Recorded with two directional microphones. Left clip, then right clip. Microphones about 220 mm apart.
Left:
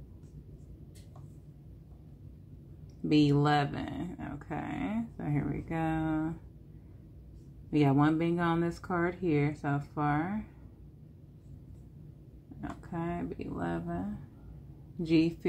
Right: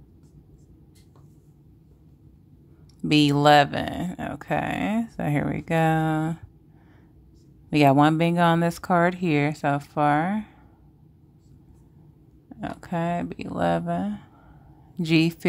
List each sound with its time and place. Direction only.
3.1 s speech: 45° right (ahead or behind)
7.7 s speech: 45° right (ahead or behind)
12.5 s speech: 45° right (ahead or behind)